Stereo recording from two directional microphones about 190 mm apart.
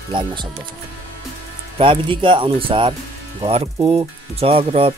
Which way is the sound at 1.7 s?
25° right (ahead or behind).